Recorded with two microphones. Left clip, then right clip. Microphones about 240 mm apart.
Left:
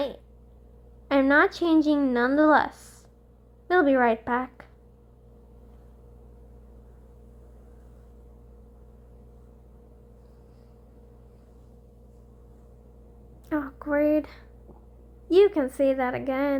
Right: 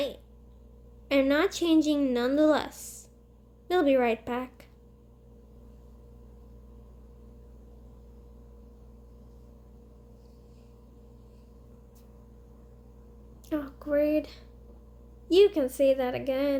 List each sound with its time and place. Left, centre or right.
1.0 s speech: left
13.5 s speech: left